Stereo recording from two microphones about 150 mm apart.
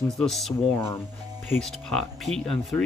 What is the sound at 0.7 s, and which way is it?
Speech, 15° left (ahead or behind).